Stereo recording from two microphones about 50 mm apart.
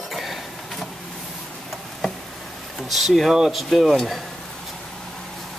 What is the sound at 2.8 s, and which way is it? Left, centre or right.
Speech, centre.